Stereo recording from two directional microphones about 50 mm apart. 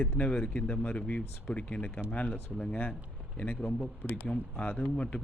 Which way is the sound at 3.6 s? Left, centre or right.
Left.